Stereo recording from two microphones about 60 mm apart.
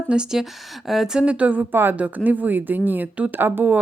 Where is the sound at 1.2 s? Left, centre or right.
Right.